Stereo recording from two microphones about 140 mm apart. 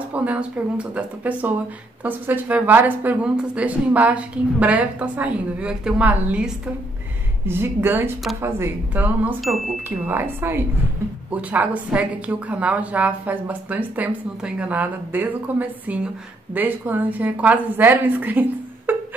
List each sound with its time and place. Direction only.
0.1 s a woman's voice: 10° right (ahead or behind)
18.9 s music: 15° right (ahead or behind)